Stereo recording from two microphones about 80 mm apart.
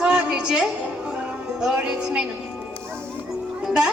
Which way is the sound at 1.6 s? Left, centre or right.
Centre.